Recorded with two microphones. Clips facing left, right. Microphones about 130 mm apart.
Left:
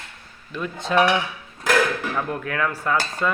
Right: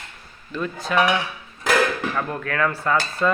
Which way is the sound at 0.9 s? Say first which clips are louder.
Left 2 dB; 25° left (ahead or behind).